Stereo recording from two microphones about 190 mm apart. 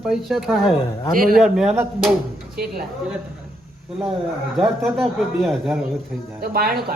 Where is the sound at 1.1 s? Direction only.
50° right (ahead or behind).